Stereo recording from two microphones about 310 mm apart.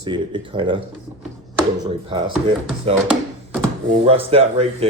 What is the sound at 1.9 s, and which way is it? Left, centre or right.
Speech, centre.